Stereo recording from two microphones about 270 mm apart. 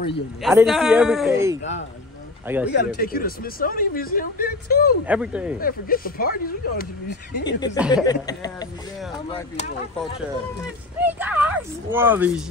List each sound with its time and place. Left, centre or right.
0.4 s a man's voice: centre
1.6 s speech: left
2.4 s speech: centre
2.7 s speech: left
5.0 s a man's voice: centre
5.6 s speech: left
7.4 s speech: centre
11.0 s speech: centre